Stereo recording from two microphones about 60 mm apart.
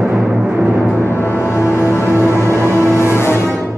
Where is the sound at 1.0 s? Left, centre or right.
Left.